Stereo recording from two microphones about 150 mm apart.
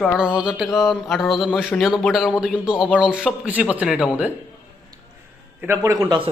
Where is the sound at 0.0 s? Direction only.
5° right (ahead or behind).